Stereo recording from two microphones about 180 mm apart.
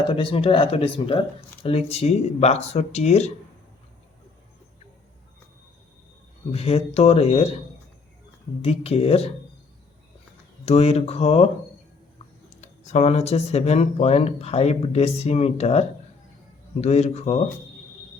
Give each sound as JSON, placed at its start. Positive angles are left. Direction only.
{"t": 0.1, "sound": "speech", "side_deg": 30}
{"t": 6.5, "sound": "speech", "side_deg": 35}
{"t": 8.6, "sound": "speech", "side_deg": 35}
{"t": 10.7, "sound": "speech", "side_deg": 35}
{"t": 12.5, "sound": "speech", "side_deg": 40}